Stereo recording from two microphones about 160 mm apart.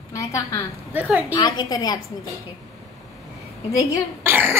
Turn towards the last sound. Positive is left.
turn(degrees=-15)  # may be behind; listen again after turning